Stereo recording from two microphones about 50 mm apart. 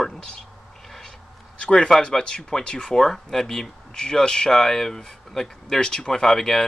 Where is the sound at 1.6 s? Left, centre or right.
Centre.